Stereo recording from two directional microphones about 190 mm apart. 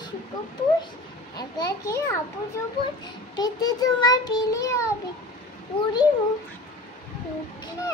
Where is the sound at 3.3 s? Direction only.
20° left (ahead or behind).